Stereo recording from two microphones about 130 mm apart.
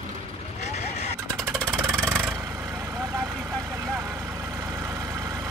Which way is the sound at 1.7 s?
20° right (ahead or behind).